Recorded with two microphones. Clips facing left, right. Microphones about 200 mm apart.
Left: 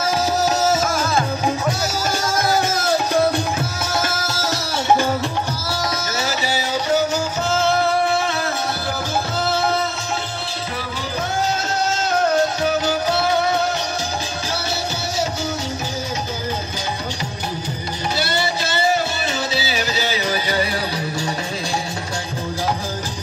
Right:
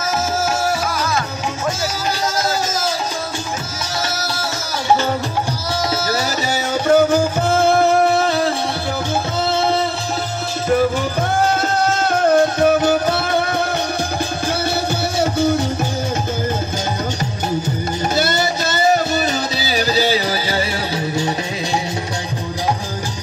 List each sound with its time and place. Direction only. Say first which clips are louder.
2.7 s music: left 3 dB; 60° left (ahead or behind)
6.0 s music: right 3 dB; 35° right (ahead or behind)
6.9 s music: right 8 dB; 55° right (ahead or behind)
12.3 s music: right 8 dB; 55° right (ahead or behind)
15.1 s music: right 9 dB; 55° right (ahead or behind)
18.1 s music: right 3 dB; 45° right (ahead or behind); by 21.3 s 25° right (ahead or behind)